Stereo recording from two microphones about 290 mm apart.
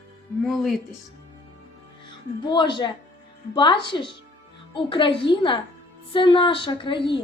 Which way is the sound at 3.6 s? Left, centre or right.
Centre.